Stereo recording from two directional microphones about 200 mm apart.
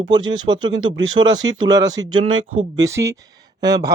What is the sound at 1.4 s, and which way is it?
Speech, 75° right (ahead or behind).